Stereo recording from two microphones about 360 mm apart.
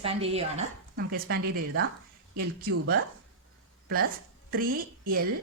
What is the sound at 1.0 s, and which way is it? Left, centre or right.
Speech, right.